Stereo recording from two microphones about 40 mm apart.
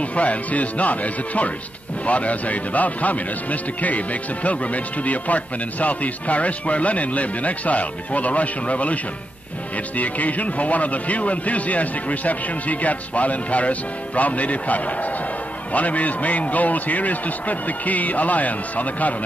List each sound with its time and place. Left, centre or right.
0.0 s a man's voice: left